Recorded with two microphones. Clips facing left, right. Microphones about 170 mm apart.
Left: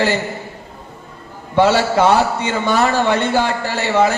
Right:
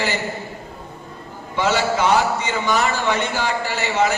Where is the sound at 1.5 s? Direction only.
55° left (ahead or behind).